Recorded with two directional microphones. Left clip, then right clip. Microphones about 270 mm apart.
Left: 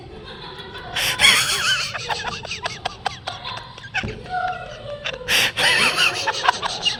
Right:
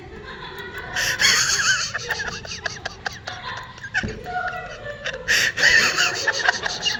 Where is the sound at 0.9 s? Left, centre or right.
Left.